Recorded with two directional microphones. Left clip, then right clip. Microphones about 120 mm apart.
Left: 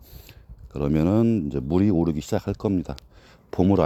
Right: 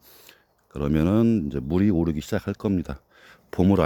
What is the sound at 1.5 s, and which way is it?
Speech, 20° right (ahead or behind).